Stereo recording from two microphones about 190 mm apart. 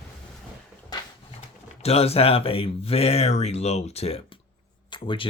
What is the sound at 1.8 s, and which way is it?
Speech, 30° left (ahead or behind).